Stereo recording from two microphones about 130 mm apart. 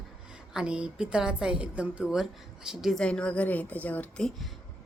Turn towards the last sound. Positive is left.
turn(degrees=10)  # may be behind; listen again after turning